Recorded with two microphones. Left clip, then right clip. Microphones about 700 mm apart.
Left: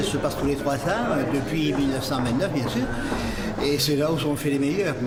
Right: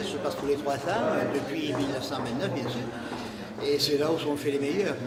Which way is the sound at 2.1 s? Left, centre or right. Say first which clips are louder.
Left 6 dB; left.